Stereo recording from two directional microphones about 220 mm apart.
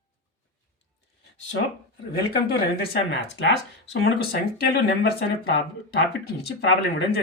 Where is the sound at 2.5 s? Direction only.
45° left (ahead or behind).